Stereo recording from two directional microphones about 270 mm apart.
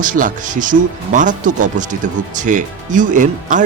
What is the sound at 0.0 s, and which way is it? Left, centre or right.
Speech, right.